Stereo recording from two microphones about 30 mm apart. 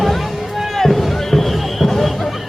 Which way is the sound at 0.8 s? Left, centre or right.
Centre.